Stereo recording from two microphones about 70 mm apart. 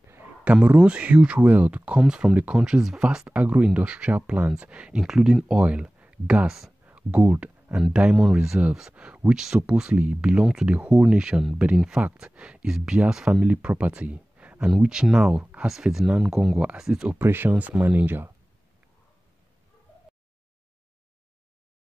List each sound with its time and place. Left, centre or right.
0.7 s speech: centre
2.0 s speech: centre
3.3 s speech: centre
5.0 s speech: centre
8.5 s speech: centre
16.5 s speech: centre
17.2 s speech: right